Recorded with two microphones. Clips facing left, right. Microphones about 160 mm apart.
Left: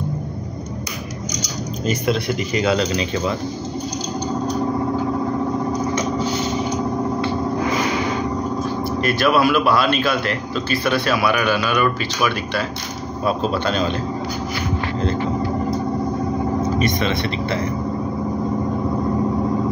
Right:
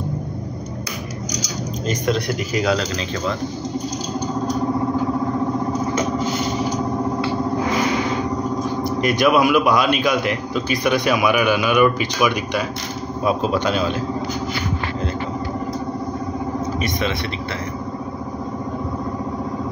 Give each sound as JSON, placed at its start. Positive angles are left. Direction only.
{"t": 1.9, "sound": "speech", "side_deg": 5}
{"t": 9.0, "sound": "a man's voice", "side_deg": -15}
{"t": 16.7, "sound": "a man's voice", "side_deg": -10}